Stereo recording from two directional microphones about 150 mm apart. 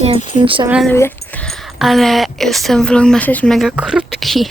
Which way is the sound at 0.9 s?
15° left (ahead or behind).